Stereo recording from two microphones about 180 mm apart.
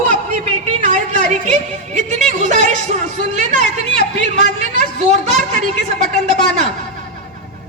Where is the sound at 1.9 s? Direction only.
40° right (ahead or behind).